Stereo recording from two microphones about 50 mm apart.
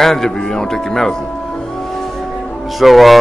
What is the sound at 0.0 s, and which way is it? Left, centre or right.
Music, centre.